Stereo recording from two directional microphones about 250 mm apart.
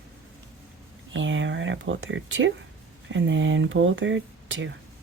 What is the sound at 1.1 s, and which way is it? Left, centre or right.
Speech, right.